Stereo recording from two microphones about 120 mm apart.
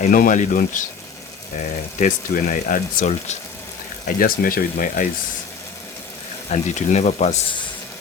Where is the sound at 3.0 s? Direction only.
75° left (ahead or behind).